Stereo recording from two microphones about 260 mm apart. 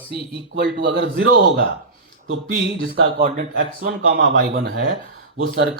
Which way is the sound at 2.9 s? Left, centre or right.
Right.